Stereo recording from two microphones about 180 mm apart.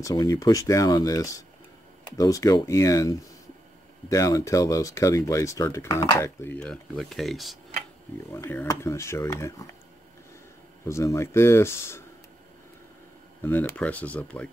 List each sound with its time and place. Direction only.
0.0 s speech: 20° left (ahead or behind); by 7.5 s centre (ahead or behind)
8.3 s speech: 15° left (ahead or behind)
10.9 s speech: 15° left (ahead or behind)
13.4 s speech: 10° left (ahead or behind)